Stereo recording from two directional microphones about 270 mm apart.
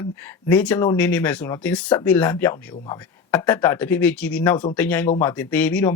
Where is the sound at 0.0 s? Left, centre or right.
Centre.